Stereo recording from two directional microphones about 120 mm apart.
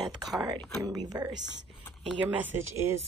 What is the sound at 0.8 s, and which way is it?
Speech, 30° right (ahead or behind).